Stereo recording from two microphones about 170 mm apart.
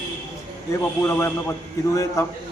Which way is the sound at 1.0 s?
15° left (ahead or behind).